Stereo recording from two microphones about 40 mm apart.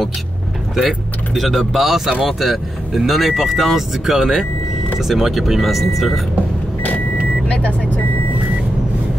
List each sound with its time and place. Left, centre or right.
0.7 s speech: centre